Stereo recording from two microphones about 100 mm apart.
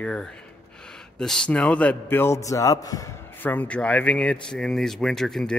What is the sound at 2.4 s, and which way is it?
Speech, 35° left (ahead or behind).